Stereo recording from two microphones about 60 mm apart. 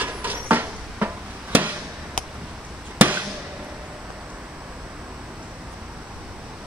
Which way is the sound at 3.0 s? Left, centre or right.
Right.